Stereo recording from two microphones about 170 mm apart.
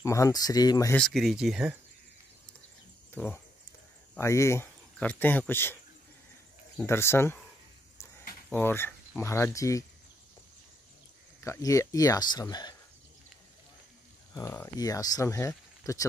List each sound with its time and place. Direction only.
0.0 s speech: 20° left (ahead or behind)
0.9 s speech: centre (ahead or behind)
3.2 s speech: 10° left (ahead or behind)
6.9 s speech: 15° left (ahead or behind)
8.5 s speech: 10° left (ahead or behind)
11.4 s speech: 20° left (ahead or behind)
14.3 s speech: 15° left (ahead or behind)